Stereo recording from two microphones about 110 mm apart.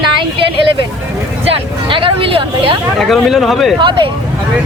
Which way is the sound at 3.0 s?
Centre (ahead or behind).